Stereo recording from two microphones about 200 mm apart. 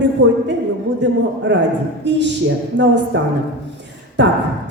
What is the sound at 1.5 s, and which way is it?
Speech, 60° right (ahead or behind).